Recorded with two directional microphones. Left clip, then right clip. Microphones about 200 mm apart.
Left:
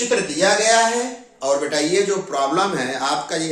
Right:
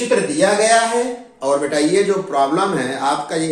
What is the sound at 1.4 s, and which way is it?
A man's voice, 25° left (ahead or behind).